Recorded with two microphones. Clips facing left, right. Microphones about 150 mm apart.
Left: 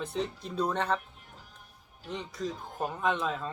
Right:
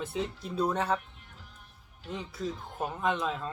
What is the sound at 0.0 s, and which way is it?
Speech, 5° right (ahead or behind).